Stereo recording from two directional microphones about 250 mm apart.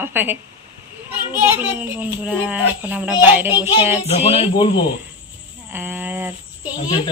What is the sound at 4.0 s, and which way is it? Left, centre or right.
Speech, left.